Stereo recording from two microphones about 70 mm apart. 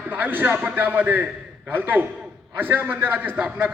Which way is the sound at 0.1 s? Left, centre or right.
Right.